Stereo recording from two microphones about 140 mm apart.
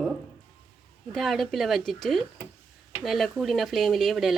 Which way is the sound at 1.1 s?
Centre (ahead or behind).